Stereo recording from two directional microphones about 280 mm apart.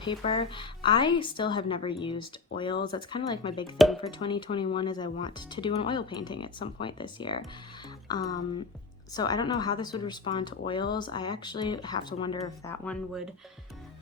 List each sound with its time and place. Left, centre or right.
0.0 s speech: centre